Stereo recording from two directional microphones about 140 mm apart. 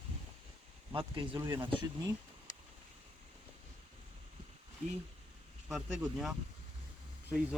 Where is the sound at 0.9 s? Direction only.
40° right (ahead or behind).